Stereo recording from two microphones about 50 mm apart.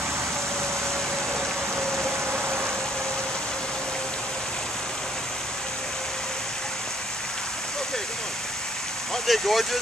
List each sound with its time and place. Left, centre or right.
1.8 s a sound: right
2.3 s vehicle: right
9.1 s speech: centre